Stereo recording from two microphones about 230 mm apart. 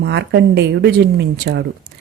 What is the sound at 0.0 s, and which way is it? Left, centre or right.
Speech, right.